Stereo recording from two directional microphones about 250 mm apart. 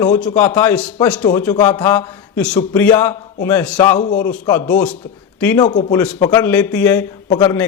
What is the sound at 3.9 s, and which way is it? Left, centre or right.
Speech, left.